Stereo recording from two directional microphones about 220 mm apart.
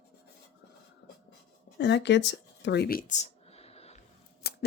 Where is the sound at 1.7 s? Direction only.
50° left (ahead or behind); by 4.0 s 30° left (ahead or behind).